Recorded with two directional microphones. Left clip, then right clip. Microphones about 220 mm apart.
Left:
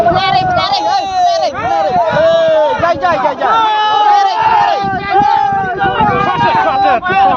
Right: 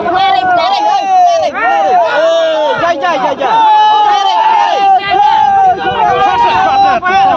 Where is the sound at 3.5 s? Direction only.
60° right (ahead or behind).